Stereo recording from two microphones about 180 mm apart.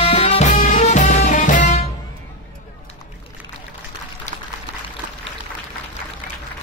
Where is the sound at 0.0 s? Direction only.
35° left (ahead or behind).